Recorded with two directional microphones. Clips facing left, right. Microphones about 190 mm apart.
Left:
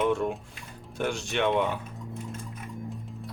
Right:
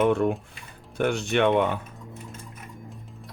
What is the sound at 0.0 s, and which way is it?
Speech, 60° right (ahead or behind).